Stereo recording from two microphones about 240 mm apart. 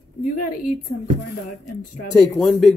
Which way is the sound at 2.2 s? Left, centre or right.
Centre.